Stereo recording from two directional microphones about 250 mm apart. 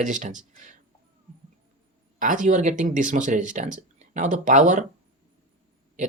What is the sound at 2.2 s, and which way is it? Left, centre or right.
Speech, right.